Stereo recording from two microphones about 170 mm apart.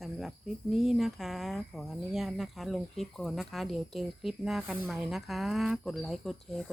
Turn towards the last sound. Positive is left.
turn(degrees=0)  # may be behind; listen again after turning